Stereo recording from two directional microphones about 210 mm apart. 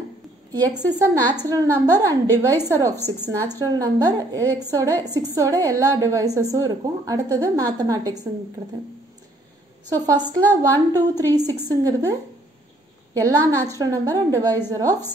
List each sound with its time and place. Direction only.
0.5 s a woman's voice: 15° right (ahead or behind)
9.8 s a woman's voice: 15° right (ahead or behind)